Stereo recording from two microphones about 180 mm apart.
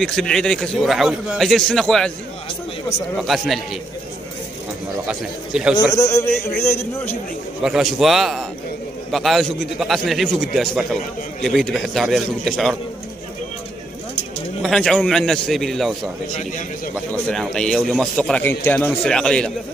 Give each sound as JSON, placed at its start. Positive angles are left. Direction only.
{"t": 0.0, "sound": "a man's voice", "side_deg": 0}
{"t": 3.2, "sound": "a man's voice", "side_deg": 0}
{"t": 5.0, "sound": "a man's voice", "side_deg": -5}
{"t": 5.9, "sound": "a man's voice", "side_deg": 15}
{"t": 7.6, "sound": "a man's voice", "side_deg": 0}
{"t": 14.6, "sound": "a man's voice", "side_deg": 5}
{"t": 16.3, "sound": "a man's voice", "side_deg": 45}
{"t": 17.1, "sound": "a man's voice", "side_deg": 5}